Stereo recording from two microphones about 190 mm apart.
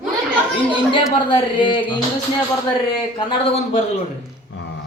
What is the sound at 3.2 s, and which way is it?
Speech, 35° left (ahead or behind).